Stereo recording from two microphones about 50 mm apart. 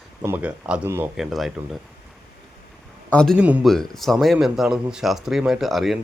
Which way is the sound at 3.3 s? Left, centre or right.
Right.